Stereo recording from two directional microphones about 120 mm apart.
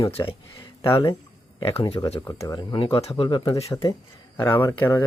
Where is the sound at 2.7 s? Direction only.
50° left (ahead or behind).